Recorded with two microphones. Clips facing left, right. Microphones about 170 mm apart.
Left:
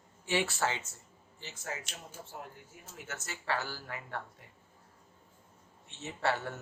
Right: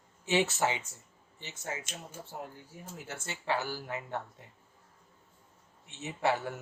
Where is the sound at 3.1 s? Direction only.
30° right (ahead or behind).